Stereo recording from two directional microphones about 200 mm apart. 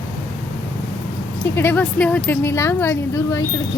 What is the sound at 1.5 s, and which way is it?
Speech, 10° left (ahead or behind).